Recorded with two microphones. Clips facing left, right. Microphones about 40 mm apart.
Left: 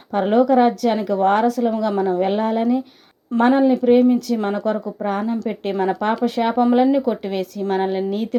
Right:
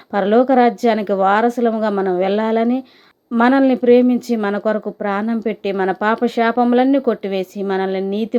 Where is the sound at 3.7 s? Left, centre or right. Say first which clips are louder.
Right 2 dB; right.